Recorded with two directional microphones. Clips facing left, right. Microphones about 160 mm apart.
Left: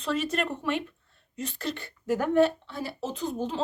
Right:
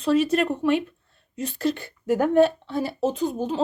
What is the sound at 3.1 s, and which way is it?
Speech, 10° right (ahead or behind).